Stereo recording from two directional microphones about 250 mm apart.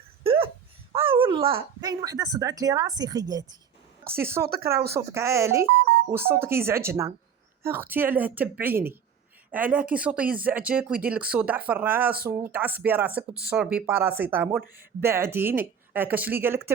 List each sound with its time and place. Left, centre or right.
0.2 s hiccup: right
0.9 s speech: right
4.4 s speech: right
4.9 s speech: centre